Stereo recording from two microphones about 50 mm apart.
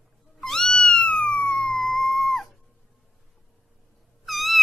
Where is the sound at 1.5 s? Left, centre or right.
Centre.